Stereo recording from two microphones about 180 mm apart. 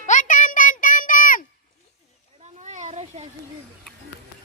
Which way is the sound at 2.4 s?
40° right (ahead or behind).